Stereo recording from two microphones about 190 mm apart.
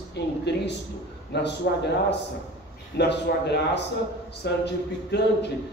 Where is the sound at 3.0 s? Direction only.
65° left (ahead or behind).